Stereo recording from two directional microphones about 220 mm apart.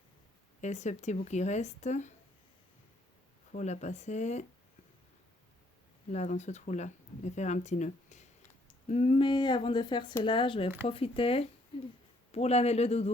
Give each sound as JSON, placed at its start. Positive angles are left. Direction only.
{"t": 0.6, "sound": "speech", "side_deg": 30}
{"t": 3.5, "sound": "speech", "side_deg": 30}
{"t": 6.1, "sound": "speech", "side_deg": 30}